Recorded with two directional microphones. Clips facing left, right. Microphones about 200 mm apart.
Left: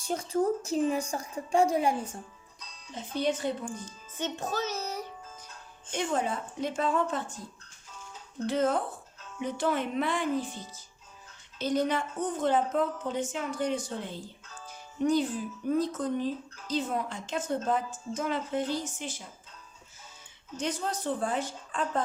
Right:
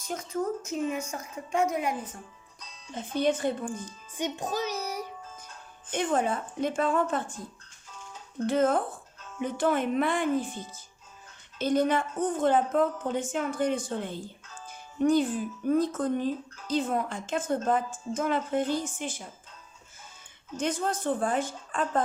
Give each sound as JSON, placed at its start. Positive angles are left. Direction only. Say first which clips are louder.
{"t": 0.0, "sound": "a woman's voice", "louder": "left 3 dB", "side_deg": 30}
{"t": 2.9, "sound": "speech", "louder": "right 3 dB", "side_deg": -50}
{"t": 3.8, "sound": "music", "louder": "right 2 dB", "side_deg": -15}
{"t": 5.9, "sound": "speech", "louder": "right 3 dB", "side_deg": -55}
{"t": 8.4, "sound": "speech", "louder": "right 3 dB", "side_deg": -50}
{"t": 11.6, "sound": "speech", "louder": "right 3 dB", "side_deg": -50}
{"t": 20.6, "sound": "speech", "louder": "right 3 dB", "side_deg": -50}